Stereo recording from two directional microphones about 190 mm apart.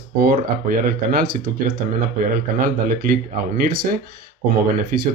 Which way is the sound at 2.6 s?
45° right (ahead or behind).